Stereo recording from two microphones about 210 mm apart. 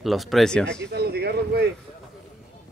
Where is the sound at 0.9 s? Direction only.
50° right (ahead or behind).